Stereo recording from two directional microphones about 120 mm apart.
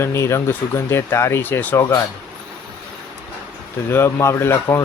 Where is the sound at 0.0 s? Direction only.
20° left (ahead or behind).